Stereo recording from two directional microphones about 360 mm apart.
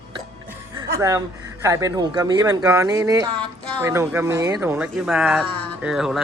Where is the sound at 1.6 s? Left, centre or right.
Centre.